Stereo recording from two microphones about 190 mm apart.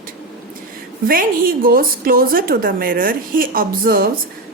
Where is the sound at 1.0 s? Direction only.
50° right (ahead or behind).